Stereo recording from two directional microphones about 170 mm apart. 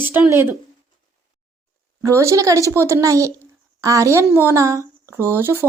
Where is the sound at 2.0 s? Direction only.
15° right (ahead or behind).